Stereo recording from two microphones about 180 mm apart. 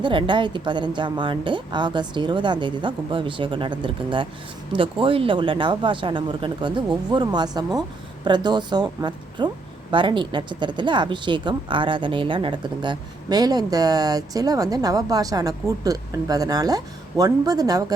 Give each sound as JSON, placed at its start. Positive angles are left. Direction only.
{"t": 0.0, "sound": "speech", "side_deg": -25}